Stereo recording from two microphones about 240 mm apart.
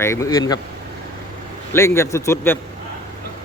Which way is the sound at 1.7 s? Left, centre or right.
Centre.